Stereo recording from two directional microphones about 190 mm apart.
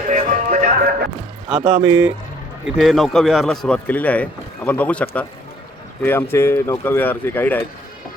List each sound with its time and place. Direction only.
0.1 s music: 45° right (ahead or behind)
1.8 s speech: 10° right (ahead or behind)
2.7 s speech: centre (ahead or behind)